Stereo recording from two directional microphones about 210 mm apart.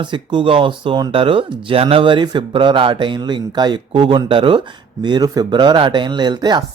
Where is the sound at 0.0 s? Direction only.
20° right (ahead or behind).